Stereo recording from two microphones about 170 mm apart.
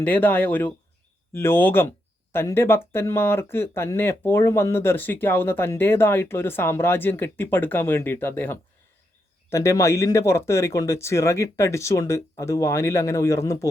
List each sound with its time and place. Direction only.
0.0 s speech: 10° left (ahead or behind)